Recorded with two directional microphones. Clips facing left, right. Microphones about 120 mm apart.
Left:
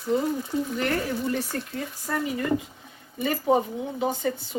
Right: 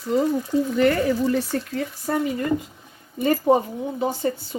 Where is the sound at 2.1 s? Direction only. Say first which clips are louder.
Right 5 dB; 60° right (ahead or behind).